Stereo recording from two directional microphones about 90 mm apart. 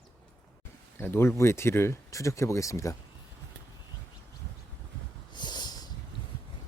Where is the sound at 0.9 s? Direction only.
30° left (ahead or behind).